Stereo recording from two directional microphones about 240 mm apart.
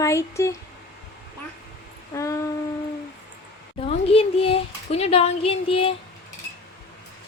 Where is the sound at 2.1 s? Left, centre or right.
Centre.